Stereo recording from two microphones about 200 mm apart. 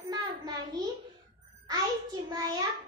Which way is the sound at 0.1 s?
20° right (ahead or behind).